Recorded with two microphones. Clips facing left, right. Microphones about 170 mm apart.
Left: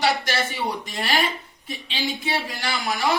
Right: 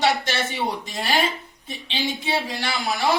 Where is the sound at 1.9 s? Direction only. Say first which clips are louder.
Right 2 dB; 25° right (ahead or behind).